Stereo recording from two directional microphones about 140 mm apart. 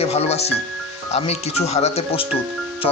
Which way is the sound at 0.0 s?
45° left (ahead or behind).